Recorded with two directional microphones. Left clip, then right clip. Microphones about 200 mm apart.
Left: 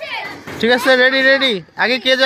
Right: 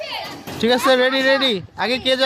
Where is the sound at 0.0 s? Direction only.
55° right (ahead or behind).